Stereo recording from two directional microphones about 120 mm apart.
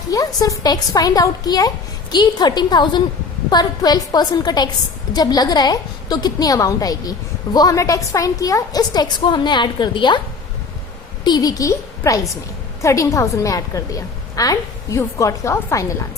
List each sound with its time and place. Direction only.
0.1 s a woman's voice: 30° left (ahead or behind)
11.2 s a woman's voice: 35° left (ahead or behind)